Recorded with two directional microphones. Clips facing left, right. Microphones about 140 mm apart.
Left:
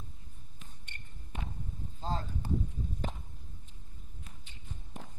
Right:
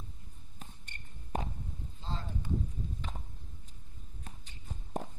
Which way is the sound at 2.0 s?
40° left (ahead or behind).